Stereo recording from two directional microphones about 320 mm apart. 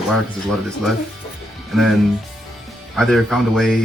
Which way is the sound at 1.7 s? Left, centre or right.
Centre.